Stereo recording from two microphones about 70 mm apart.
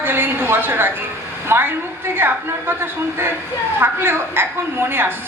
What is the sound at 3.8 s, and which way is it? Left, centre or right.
A woman's voice, right.